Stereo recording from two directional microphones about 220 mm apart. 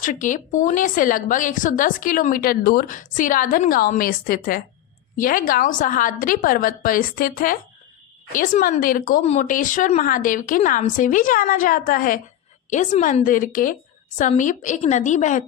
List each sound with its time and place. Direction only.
0.0 s speech: 35° left (ahead or behind)